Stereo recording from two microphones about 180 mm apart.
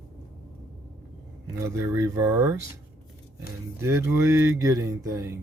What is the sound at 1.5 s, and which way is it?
Speech, 15° right (ahead or behind).